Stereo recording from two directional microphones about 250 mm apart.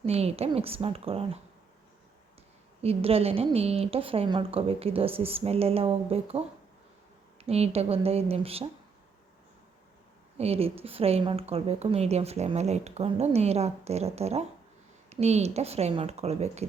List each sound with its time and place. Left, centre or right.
0.0 s speech: right
2.8 s speech: right
7.4 s speech: right
10.3 s speech: right